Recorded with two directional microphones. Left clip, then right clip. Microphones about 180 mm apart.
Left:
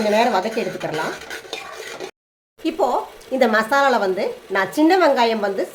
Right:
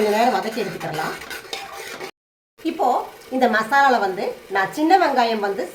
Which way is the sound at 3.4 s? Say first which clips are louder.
Even; 65° left (ahead or behind).